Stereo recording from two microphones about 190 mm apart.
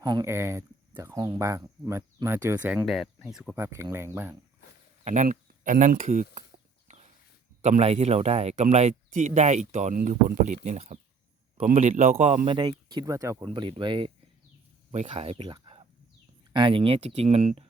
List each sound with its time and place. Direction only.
0.0 s speech: 20° right (ahead or behind)
5.0 s speech: 40° right (ahead or behind)
6.9 s a sound: 35° right (ahead or behind)
7.6 s speech: 35° right (ahead or behind)